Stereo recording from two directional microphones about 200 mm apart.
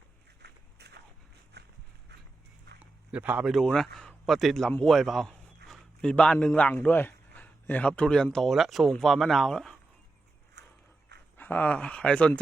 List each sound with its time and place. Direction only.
0.4 s walk: 55° right (ahead or behind)
1.5 s dog: 55° right (ahead or behind)
3.1 s a man's voice: 10° right (ahead or behind)
11.3 s speech: 10° left (ahead or behind)